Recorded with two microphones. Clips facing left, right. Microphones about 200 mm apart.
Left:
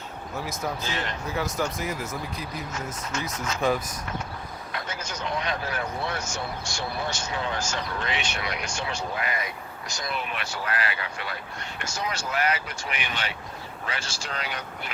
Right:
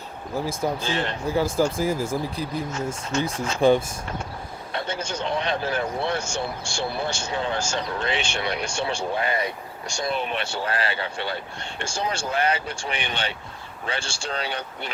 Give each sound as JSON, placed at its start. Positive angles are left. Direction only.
{"t": 0.3, "sound": "a man's voice", "side_deg": -30}